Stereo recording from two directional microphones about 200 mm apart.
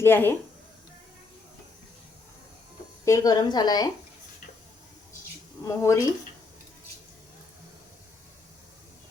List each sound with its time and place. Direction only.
0.0 s speech: 10° left (ahead or behind)
3.0 s a woman's voice: 15° left (ahead or behind)
5.6 s speech: 15° left (ahead or behind)